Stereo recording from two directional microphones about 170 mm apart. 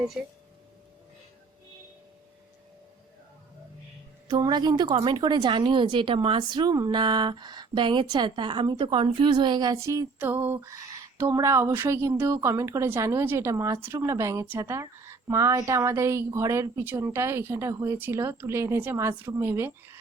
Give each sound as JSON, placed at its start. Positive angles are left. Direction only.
{"t": 0.2, "sound": "a woman's voice", "side_deg": -5}
{"t": 4.3, "sound": "a woman's voice", "side_deg": -25}